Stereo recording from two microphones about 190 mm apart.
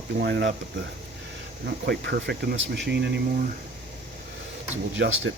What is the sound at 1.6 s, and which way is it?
Speech, 55° right (ahead or behind).